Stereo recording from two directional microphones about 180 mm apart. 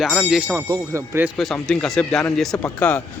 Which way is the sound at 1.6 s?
5° left (ahead or behind).